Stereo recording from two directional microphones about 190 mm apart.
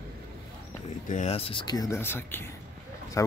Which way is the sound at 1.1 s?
35° left (ahead or behind).